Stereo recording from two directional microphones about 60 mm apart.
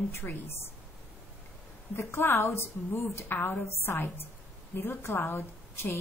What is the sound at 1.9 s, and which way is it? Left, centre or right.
A woman's voice, left.